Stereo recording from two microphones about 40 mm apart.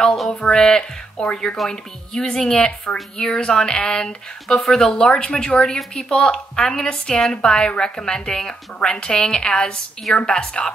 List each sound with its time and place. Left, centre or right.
0.5 s a woman's voice: centre
1.7 s speech: centre
3.3 s speech: left
5.1 s a woman's voice: left